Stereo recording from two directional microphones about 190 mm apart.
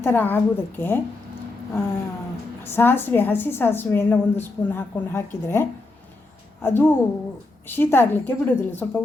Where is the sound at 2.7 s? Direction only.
10° left (ahead or behind).